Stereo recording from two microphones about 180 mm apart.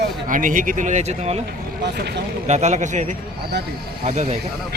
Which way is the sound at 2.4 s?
40° right (ahead or behind).